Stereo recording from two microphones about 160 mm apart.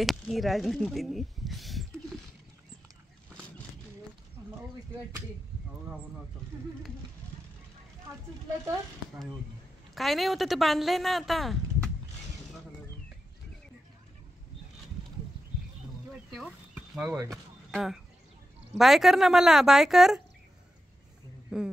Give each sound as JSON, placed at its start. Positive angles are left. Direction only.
{"t": 0.0, "sound": "speech", "side_deg": 0}
{"t": 8.1, "sound": "speech", "side_deg": -15}
{"t": 9.9, "sound": "speech", "side_deg": 0}
{"t": 16.7, "sound": "a sound", "side_deg": -5}
{"t": 17.6, "sound": "speech", "side_deg": -5}
{"t": 21.5, "sound": "speech", "side_deg": -5}